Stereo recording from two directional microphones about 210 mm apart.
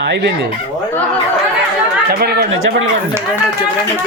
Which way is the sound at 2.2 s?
50° right (ahead or behind).